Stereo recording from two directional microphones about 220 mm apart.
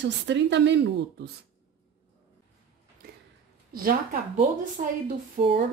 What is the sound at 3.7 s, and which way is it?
Speech, 40° right (ahead or behind).